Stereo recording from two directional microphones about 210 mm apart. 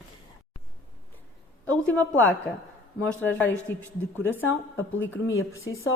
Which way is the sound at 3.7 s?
10° left (ahead or behind).